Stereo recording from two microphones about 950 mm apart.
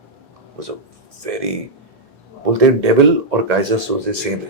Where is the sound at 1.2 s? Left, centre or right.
Right.